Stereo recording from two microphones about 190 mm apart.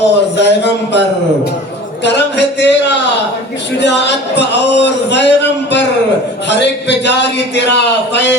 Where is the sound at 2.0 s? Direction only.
65° left (ahead or behind).